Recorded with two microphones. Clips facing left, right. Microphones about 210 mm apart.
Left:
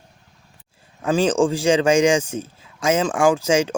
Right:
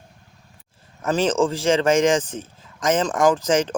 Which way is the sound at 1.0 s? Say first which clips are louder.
Left 2 dB; 10° left (ahead or behind).